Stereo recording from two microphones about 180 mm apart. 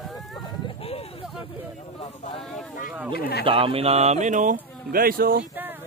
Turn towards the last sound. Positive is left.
turn(degrees=-10)  # may be behind; listen again after turning